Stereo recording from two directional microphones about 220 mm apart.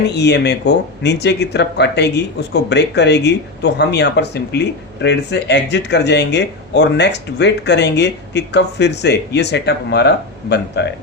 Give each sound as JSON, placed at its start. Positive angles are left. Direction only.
{"t": 0.0, "sound": "speech", "side_deg": 50}